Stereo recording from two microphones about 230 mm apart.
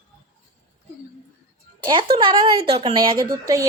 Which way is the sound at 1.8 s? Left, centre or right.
Right.